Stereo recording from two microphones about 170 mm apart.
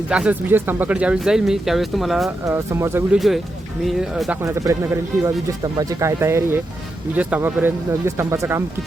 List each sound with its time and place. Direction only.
0.1 s speech: 5° right (ahead or behind)
2.5 s speech: 15° right (ahead or behind)
3.2 s speech: centre (ahead or behind)
4.4 s speech: 20° right (ahead or behind)